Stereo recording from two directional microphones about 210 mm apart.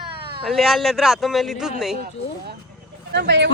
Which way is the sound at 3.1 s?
55° right (ahead or behind).